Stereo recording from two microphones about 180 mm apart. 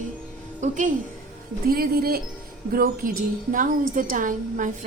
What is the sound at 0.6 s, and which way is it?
Speech, 45° right (ahead or behind).